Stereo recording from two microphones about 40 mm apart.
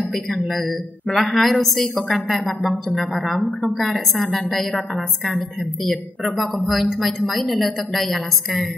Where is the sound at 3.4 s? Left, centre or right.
Left.